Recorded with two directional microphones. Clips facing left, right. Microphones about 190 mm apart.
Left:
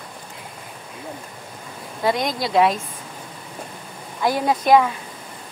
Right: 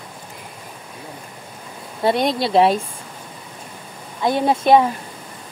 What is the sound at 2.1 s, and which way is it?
Speech, 30° right (ahead or behind).